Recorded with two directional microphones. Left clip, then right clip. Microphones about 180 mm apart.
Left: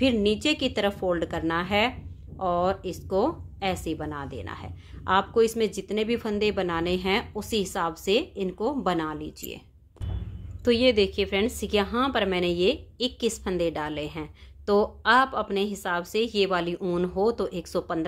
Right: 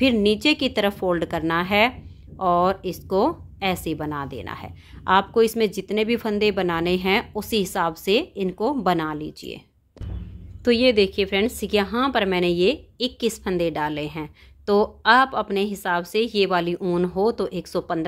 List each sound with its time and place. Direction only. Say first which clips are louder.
0.0 s speech: right 4 dB; 25° right (ahead or behind)
10.6 s speech: right 3 dB; 20° right (ahead or behind)